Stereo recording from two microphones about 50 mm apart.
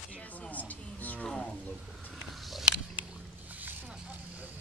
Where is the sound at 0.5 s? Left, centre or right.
Left.